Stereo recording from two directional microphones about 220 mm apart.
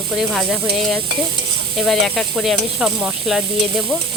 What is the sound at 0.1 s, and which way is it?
Sizzle, centre (ahead or behind).